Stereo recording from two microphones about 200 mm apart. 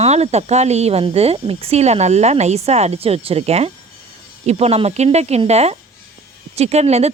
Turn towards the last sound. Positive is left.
turn(degrees=-30)  # may be behind; listen again after turning